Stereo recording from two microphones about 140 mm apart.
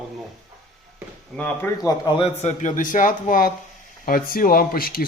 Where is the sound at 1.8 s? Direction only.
30° left (ahead or behind).